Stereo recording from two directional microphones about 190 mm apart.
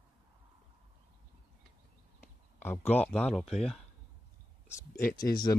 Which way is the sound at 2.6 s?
10° left (ahead or behind).